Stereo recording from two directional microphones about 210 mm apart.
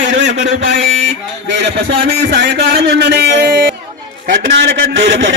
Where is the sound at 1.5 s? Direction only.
60° right (ahead or behind).